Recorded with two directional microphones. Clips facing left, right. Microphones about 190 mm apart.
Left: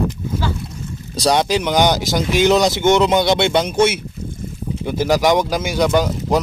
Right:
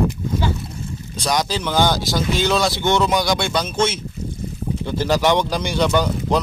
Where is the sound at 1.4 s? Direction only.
15° left (ahead or behind).